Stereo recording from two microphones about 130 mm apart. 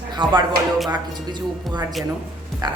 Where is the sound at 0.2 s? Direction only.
35° right (ahead or behind).